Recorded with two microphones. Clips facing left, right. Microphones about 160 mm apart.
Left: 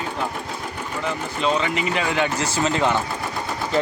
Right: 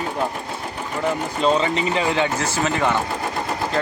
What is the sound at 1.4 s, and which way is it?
Speech, 30° right (ahead or behind).